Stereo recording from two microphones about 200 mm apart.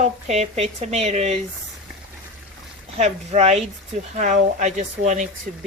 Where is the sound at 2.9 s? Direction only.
35° right (ahead or behind).